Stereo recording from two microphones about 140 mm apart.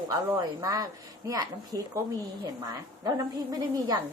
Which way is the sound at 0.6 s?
25° right (ahead or behind).